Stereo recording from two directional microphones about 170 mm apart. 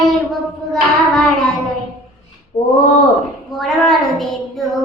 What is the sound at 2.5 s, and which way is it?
Speech, 15° left (ahead or behind).